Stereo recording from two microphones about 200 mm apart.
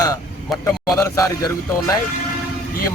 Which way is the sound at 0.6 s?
15° left (ahead or behind).